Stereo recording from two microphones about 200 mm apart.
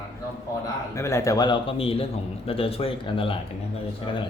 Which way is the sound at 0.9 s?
15° left (ahead or behind).